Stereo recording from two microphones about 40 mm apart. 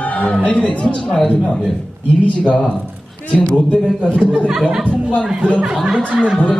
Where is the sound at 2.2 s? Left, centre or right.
Left.